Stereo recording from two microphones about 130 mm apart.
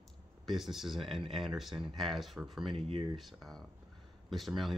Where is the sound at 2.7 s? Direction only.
45° right (ahead or behind).